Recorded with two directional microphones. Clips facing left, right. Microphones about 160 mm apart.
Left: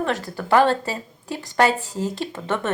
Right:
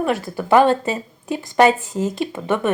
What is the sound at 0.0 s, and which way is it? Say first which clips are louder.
Speech: right 4 dB; 15° right (ahead or behind).